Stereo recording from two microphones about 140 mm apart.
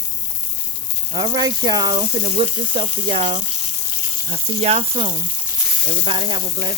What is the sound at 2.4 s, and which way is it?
Frying, 40° right (ahead or behind).